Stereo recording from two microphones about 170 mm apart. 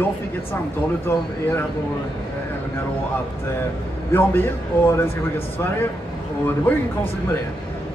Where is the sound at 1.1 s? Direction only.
15° left (ahead or behind).